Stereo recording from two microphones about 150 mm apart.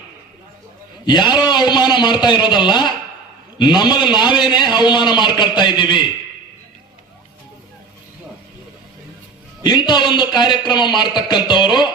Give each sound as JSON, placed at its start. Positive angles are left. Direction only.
{"t": 1.0, "sound": "a man's voice", "side_deg": 30}
{"t": 9.6, "sound": "a man's voice", "side_deg": 30}